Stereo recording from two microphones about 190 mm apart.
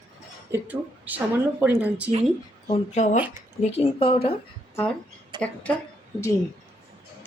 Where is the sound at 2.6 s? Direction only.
35° left (ahead or behind).